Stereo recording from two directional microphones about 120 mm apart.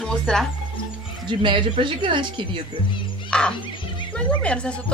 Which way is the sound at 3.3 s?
5° left (ahead or behind).